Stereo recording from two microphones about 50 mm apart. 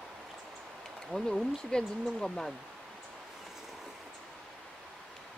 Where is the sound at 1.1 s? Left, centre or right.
Centre.